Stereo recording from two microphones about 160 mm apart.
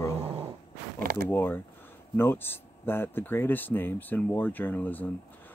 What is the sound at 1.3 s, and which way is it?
Speech, 15° left (ahead or behind).